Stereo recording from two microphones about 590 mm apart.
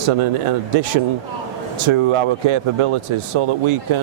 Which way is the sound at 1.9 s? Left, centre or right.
Right.